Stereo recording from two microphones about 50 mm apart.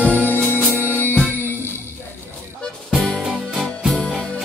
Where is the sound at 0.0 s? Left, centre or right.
Left.